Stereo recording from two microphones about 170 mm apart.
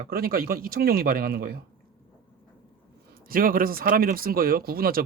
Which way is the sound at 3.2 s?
55° right (ahead or behind).